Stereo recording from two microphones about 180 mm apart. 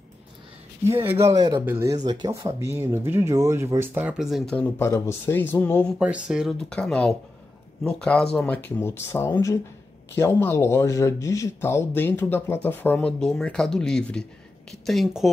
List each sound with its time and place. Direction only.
0.8 s speech: 15° right (ahead or behind); by 5.9 s 10° left (ahead or behind)
5.9 s speech: 5° right (ahead or behind)